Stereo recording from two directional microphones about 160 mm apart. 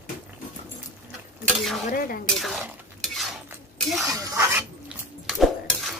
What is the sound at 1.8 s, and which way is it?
Speech, 65° left (ahead or behind).